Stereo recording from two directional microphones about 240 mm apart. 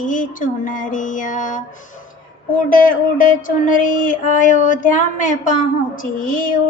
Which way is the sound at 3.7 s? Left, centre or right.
Left.